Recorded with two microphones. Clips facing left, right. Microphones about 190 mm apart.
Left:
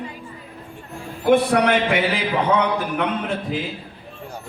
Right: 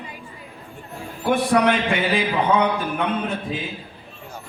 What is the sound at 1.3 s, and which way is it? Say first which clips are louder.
A man's voice: left 2 dB; 65° left (ahead or behind).